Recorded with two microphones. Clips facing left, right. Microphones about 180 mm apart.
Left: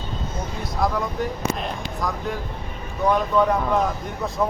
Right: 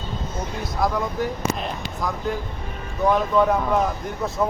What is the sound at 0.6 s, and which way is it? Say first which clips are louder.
Speech: even; centre (ahead or behind).